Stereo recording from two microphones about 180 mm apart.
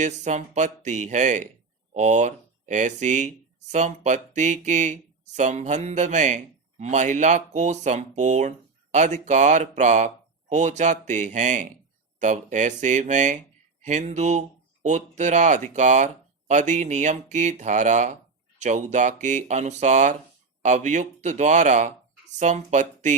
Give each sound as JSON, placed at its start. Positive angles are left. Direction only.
{"t": 0.0, "sound": "speech", "side_deg": -40}